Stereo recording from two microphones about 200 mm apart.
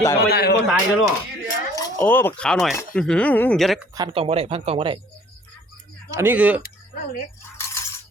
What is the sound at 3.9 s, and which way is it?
Speech, 25° right (ahead or behind).